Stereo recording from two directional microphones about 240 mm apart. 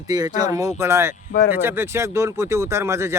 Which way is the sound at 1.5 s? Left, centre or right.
Centre.